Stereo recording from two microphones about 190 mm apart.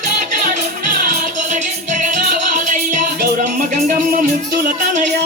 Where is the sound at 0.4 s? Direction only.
50° right (ahead or behind).